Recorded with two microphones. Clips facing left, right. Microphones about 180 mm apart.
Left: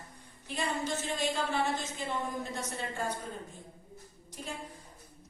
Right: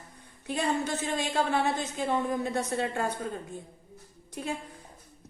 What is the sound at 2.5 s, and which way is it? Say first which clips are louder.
Speech: right 8 dB; 60° right (ahead or behind).